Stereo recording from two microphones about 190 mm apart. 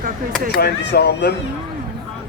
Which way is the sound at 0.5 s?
65° left (ahead or behind).